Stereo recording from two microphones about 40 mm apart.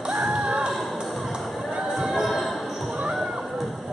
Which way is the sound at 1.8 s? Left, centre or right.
Centre.